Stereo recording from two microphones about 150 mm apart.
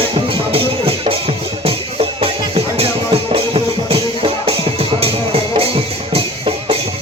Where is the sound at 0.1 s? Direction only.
35° right (ahead or behind).